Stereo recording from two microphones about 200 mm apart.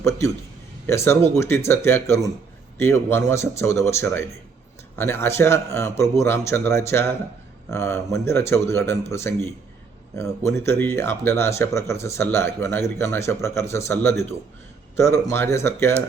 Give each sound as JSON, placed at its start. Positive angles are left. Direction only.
{"t": 0.9, "sound": "speech", "side_deg": 15}